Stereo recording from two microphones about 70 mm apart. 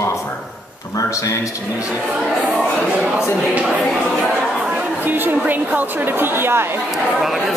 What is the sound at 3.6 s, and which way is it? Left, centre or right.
Speech, centre.